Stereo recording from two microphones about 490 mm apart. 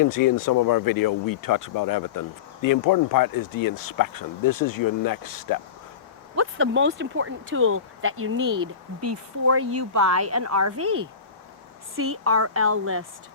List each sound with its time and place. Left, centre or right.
0.0 s speech: left
6.3 s speech: right